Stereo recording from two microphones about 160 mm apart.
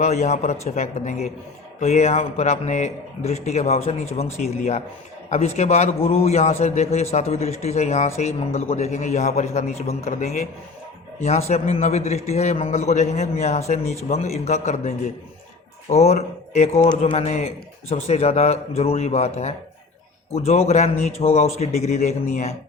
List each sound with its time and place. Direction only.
0.0 s a man's voice: 45° left (ahead or behind)